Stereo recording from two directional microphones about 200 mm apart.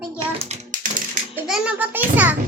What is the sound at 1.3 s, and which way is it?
Music, 5° right (ahead or behind).